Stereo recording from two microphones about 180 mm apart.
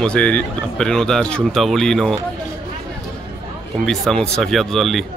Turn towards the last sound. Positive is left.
turn(degrees=0)  # may be behind; listen again after turning